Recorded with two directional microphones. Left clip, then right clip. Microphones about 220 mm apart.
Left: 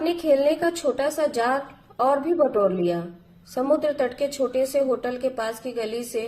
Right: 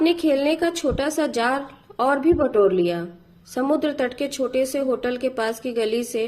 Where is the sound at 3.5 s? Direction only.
40° right (ahead or behind).